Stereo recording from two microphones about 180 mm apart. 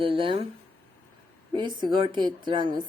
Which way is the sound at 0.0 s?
30° right (ahead or behind).